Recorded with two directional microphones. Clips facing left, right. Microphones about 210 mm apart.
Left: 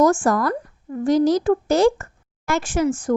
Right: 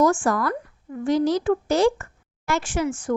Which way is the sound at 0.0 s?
45° left (ahead or behind).